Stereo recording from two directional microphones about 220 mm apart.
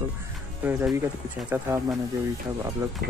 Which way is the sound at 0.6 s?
10° right (ahead or behind).